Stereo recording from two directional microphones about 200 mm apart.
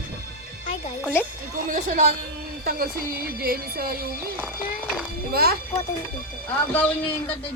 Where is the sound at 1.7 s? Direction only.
40° right (ahead or behind).